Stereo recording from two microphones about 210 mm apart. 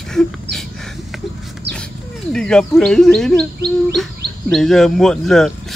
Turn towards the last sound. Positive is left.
turn(degrees=0)  # may be behind; listen again after turning